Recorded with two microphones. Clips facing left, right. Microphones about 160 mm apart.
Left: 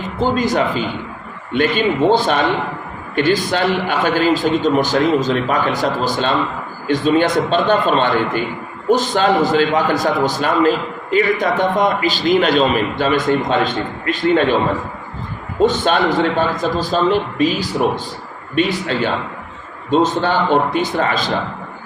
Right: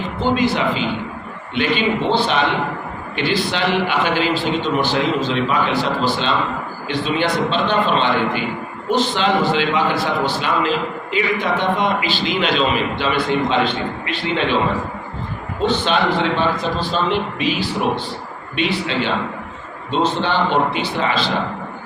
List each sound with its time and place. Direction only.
0.2 s a man's voice: 40° left (ahead or behind)
15.6 s a man's voice: 45° left (ahead or behind)